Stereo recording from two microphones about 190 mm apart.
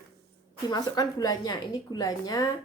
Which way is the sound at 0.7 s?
20° left (ahead or behind).